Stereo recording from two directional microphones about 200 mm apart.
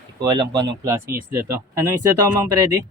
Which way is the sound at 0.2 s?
20° right (ahead or behind).